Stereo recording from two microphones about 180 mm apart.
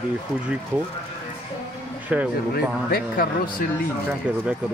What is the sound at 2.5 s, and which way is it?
A man's voice, 55° left (ahead or behind).